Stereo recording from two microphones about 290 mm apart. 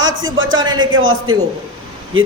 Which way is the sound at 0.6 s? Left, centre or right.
Centre.